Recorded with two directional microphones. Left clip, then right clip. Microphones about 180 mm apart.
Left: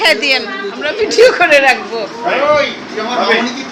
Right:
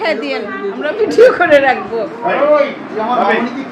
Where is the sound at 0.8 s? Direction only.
20° right (ahead or behind).